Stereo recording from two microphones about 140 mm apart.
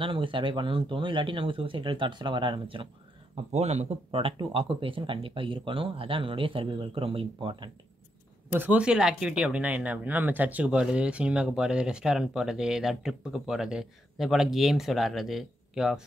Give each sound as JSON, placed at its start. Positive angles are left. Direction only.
{"t": 0.0, "sound": "speech", "side_deg": -35}
{"t": 3.5, "sound": "speech", "side_deg": -55}
{"t": 8.5, "sound": "speech", "side_deg": -10}